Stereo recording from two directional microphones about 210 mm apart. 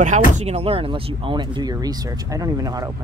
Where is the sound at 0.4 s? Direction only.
30° right (ahead or behind).